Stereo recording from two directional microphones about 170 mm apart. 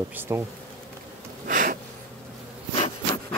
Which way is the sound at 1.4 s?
50° right (ahead or behind).